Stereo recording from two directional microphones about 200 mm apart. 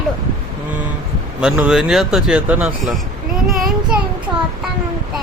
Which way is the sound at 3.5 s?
Centre (ahead or behind).